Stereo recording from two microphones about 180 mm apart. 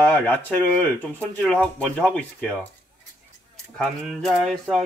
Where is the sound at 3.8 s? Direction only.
Centre (ahead or behind).